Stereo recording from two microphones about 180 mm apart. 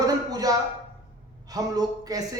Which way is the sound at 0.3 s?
20° right (ahead or behind).